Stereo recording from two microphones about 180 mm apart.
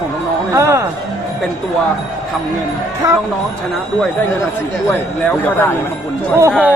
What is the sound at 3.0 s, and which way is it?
Speech, 20° right (ahead or behind).